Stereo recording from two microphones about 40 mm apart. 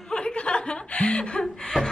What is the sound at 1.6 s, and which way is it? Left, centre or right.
Laughter, centre.